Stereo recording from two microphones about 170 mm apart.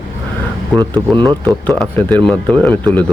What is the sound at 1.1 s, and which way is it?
Speech, 25° right (ahead or behind).